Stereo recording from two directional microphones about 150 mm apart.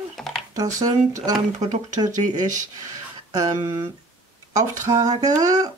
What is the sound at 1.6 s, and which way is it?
Speech, 55° right (ahead or behind).